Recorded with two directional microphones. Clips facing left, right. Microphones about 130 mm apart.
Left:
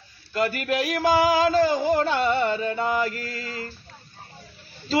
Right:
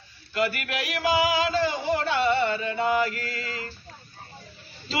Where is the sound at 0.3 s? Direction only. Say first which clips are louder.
Left 3 dB; 40° left (ahead or behind).